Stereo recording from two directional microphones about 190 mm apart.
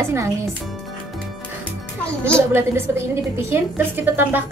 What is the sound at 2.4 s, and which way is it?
A woman's voice, 15° right (ahead or behind).